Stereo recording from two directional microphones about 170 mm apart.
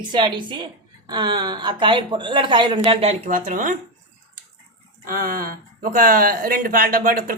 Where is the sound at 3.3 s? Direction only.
50° right (ahead or behind).